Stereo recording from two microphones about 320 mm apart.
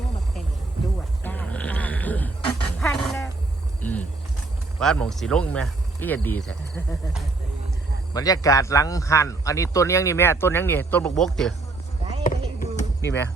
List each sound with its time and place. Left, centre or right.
1.2 s a sound: centre
2.8 s dog: centre
4.8 s speech: centre
8.1 s a man's voice: centre
12.2 s a sound: left
13.0 s speech: centre